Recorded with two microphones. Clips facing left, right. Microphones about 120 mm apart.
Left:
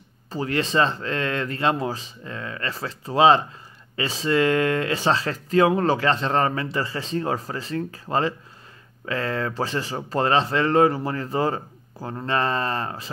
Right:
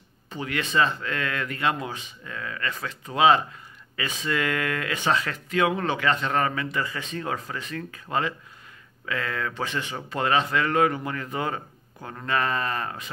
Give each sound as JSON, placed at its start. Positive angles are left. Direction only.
{"t": 0.3, "sound": "speech", "side_deg": 35}